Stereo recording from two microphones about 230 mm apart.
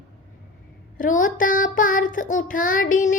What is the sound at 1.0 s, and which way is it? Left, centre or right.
Speech, left.